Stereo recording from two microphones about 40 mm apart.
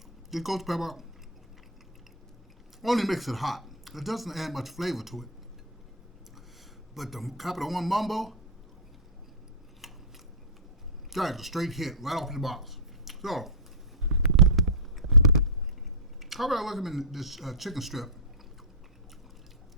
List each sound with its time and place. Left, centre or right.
0.3 s speech: centre
2.8 s speech: centre
6.9 s speech: centre
9.8 s scissors: centre
11.1 s speech: centre
13.1 s a sound: centre
16.2 s speech: centre